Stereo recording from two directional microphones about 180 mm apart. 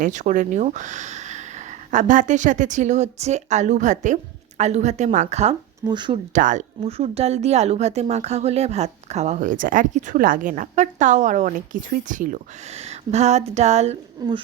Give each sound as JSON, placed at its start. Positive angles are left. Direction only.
{"t": 0.0, "sound": "speech", "side_deg": -45}
{"t": 5.9, "sound": "speech", "side_deg": -25}
{"t": 6.3, "sound": "speech", "side_deg": -45}
{"t": 14.2, "sound": "speech", "side_deg": -20}